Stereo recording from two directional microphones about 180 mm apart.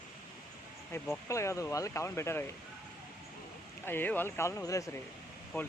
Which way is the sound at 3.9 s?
10° left (ahead or behind).